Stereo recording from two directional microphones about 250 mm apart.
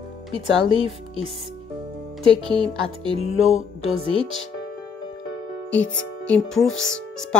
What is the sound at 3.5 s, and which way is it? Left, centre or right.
Music, right.